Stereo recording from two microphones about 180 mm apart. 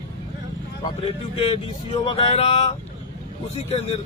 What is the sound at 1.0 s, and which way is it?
Speech, 30° left (ahead or behind).